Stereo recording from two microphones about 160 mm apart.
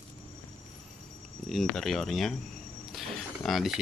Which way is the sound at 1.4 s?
Centre (ahead or behind).